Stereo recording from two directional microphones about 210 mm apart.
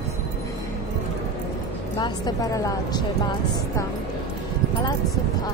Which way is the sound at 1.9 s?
20° left (ahead or behind).